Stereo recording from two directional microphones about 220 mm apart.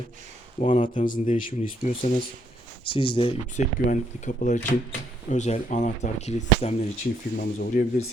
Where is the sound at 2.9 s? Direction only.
25° left (ahead or behind).